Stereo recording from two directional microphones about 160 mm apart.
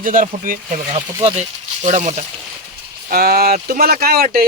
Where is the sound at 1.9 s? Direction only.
50° right (ahead or behind).